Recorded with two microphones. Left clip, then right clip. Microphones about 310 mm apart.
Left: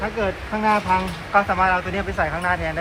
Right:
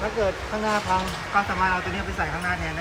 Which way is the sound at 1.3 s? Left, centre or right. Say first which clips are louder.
Left 5 dB; centre.